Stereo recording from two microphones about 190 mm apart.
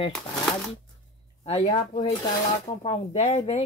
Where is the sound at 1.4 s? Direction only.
30° left (ahead or behind).